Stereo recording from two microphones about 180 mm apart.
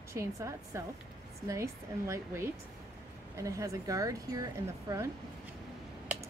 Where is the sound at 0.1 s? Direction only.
15° right (ahead or behind).